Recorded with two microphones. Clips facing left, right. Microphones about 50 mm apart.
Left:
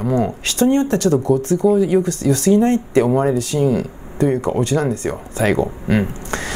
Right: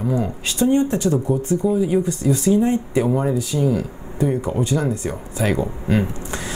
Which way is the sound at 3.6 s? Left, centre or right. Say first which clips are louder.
Left 3 dB; left.